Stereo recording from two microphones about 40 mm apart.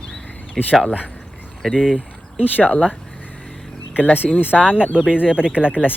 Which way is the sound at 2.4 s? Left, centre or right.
Left.